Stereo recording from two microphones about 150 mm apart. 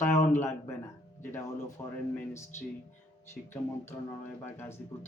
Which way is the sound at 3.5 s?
15° left (ahead or behind).